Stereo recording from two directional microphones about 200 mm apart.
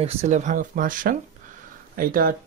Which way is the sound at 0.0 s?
30° right (ahead or behind).